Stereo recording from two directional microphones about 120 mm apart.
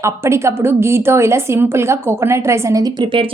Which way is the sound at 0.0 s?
25° right (ahead or behind).